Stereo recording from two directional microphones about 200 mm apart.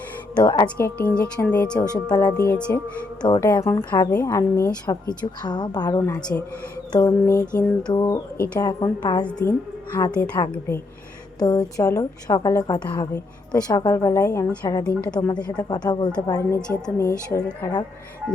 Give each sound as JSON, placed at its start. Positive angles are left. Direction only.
{"t": 0.3, "sound": "a woman's voice", "side_deg": 20}
{"t": 0.8, "sound": "a woman's voice", "side_deg": 10}
{"t": 1.8, "sound": "a woman's voice", "side_deg": 20}
{"t": 2.4, "sound": "a woman's voice", "side_deg": 5}
{"t": 3.2, "sound": "a woman's voice", "side_deg": 20}
{"t": 6.0, "sound": "a woman's voice", "side_deg": 5}
{"t": 7.5, "sound": "a sound", "side_deg": 5}
{"t": 7.9, "sound": "a woman's voice", "side_deg": 20}
{"t": 10.4, "sound": "a woman's voice", "side_deg": 25}
{"t": 15.4, "sound": "a woman's voice", "side_deg": 20}